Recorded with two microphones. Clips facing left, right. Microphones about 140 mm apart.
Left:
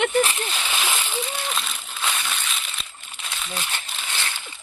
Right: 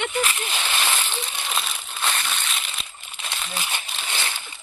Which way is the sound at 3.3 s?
10° right (ahead or behind).